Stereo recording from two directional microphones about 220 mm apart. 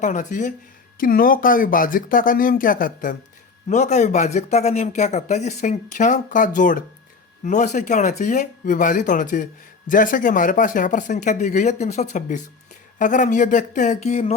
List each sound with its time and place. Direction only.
0.0 s speech: 35° left (ahead or behind)